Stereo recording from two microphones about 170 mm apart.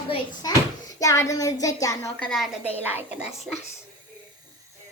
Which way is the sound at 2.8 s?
10° right (ahead or behind).